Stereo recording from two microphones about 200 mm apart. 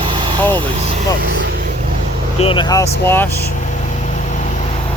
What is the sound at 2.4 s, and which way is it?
Speech, 25° left (ahead or behind).